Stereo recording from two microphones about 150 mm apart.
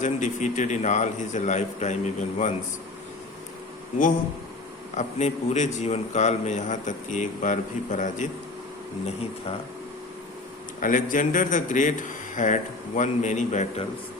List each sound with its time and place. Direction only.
0.0 s a man's voice: 55° left (ahead or behind)
4.9 s a man's voice: 50° left (ahead or behind)
9.0 s speech: 40° left (ahead or behind)
10.8 s a man's voice: 65° left (ahead or behind)